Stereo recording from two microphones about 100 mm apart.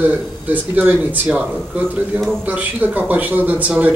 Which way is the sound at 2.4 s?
15° right (ahead or behind).